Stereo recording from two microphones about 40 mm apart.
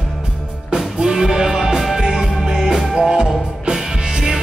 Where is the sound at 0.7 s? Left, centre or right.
Centre.